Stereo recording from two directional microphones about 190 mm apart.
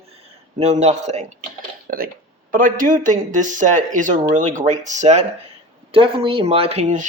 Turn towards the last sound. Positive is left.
turn(degrees=-35)  # may be behind; listen again after turning